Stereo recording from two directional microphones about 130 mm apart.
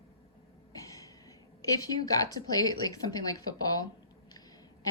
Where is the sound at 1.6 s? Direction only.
30° left (ahead or behind).